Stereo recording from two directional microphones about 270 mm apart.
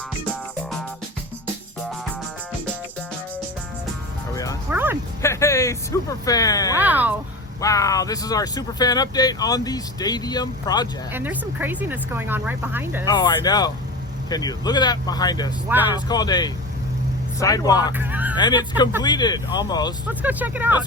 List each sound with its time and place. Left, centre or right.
4.7 s music: centre
5.2 s speech: centre
6.7 s speech: centre
7.6 s speech: centre
11.1 s speech: centre
13.1 s speech: centre
15.7 s speech: centre
16.0 s speech: centre
17.9 s speech: centre
18.3 s speech: centre
20.1 s speech: centre